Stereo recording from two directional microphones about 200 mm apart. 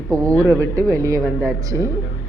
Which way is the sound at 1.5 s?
15° right (ahead or behind).